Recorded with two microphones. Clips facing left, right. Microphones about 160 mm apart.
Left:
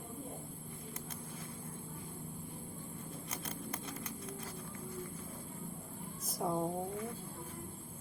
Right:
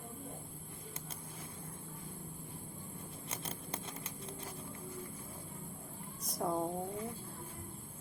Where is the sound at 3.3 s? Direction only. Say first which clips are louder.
Even; 30° right (ahead or behind).